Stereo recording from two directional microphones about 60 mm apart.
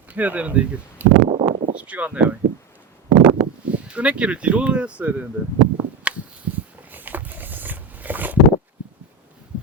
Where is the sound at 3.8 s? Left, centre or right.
Right.